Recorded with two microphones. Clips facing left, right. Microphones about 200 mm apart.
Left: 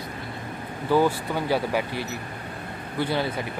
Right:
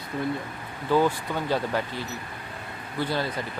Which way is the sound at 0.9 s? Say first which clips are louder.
Left 1 dB; 10° left (ahead or behind).